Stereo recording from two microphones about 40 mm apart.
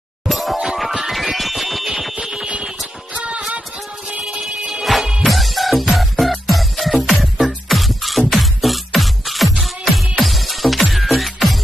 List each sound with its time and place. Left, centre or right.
0.3 s music: centre
2.1 s music: centre
3.2 s music: right
4.9 s music: centre